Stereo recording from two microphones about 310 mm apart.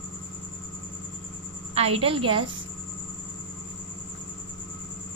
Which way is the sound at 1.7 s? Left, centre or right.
Centre.